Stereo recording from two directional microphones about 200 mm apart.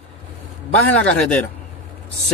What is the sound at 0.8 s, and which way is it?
Speech, 5° left (ahead or behind).